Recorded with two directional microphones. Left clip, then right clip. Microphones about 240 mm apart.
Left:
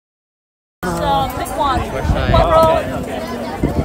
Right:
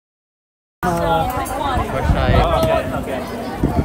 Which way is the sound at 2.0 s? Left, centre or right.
Right.